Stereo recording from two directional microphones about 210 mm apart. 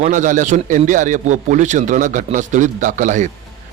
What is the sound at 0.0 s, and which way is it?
A man's voice, 40° right (ahead or behind).